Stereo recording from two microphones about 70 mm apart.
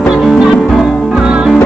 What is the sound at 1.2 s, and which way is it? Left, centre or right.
Music, centre.